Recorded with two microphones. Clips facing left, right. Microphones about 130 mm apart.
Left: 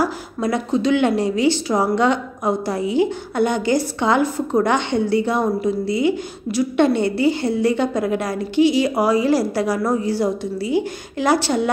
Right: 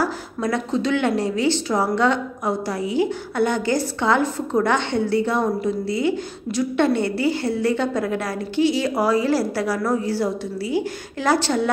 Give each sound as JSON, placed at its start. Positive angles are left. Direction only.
{"t": 0.0, "sound": "a woman's voice", "side_deg": 15}